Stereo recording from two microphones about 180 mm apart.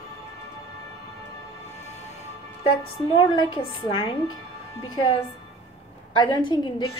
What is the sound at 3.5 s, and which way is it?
A woman's voice, 30° left (ahead or behind).